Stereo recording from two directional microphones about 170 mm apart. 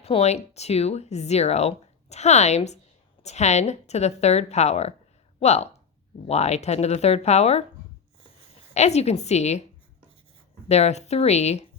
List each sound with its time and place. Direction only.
0.0 s speech: 35° left (ahead or behind)
8.7 s speech: 40° left (ahead or behind)
10.7 s speech: 40° left (ahead or behind)